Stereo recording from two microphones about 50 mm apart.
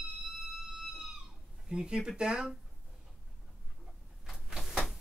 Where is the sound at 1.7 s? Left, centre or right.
Centre.